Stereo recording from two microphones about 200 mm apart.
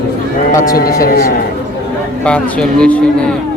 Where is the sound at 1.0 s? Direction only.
50° left (ahead or behind).